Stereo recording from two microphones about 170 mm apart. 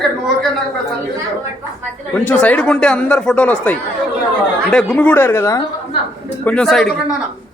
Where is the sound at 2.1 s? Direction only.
10° left (ahead or behind).